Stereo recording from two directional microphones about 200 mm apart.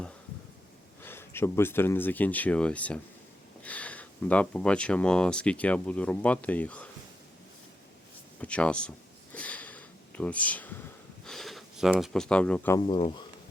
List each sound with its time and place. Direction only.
1.0 s speech: 10° left (ahead or behind)
8.4 s speech: 5° left (ahead or behind)
9.3 s sniff: 5° left (ahead or behind)
11.3 s speech: centre (ahead or behind)
12.7 s speech: 25° left (ahead or behind)